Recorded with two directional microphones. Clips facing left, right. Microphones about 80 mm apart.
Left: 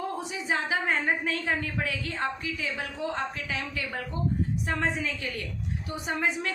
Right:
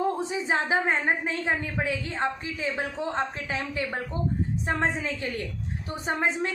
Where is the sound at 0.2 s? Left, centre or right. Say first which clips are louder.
Right 3 dB; right.